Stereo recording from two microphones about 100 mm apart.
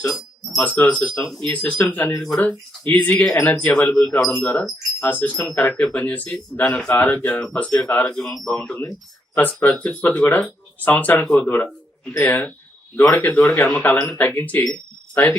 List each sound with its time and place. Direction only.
0.0 s speech: 5° left (ahead or behind)
9.3 s speech: 15° left (ahead or behind)